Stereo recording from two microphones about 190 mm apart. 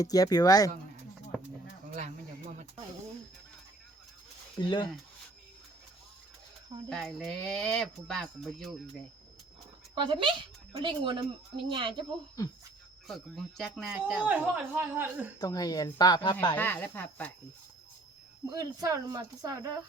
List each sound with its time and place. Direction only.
0.0 s a woman's voice: 20° left (ahead or behind)
1.9 s a sound: 40° right (ahead or behind)
4.5 s a woman's voice: 25° left (ahead or behind)
6.9 s speech: centre (ahead or behind)
9.9 s a woman's voice: 25° right (ahead or behind)
13.1 s speech: centre (ahead or behind)
15.4 s a woman's voice: 20° left (ahead or behind)
16.6 s speech: 10° left (ahead or behind)
18.5 s a woman's voice: 20° right (ahead or behind)